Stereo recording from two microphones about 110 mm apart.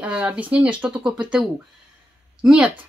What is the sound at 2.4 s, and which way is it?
Speech, 10° right (ahead or behind).